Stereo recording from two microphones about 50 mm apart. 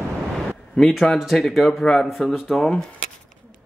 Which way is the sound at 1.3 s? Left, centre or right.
Centre.